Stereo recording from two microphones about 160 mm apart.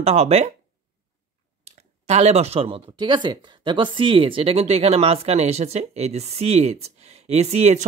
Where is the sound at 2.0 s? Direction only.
40° right (ahead or behind).